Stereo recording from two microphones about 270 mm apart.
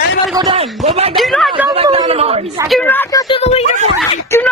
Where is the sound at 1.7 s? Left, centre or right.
Centre.